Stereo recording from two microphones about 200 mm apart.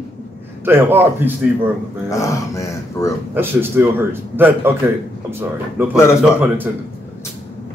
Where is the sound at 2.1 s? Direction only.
15° left (ahead or behind).